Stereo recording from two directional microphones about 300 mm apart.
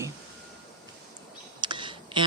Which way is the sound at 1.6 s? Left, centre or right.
Centre.